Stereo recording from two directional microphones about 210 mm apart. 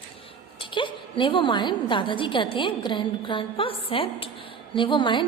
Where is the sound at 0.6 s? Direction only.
25° left (ahead or behind).